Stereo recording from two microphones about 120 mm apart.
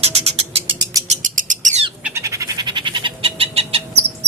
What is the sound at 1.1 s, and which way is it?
Bird, 90° right.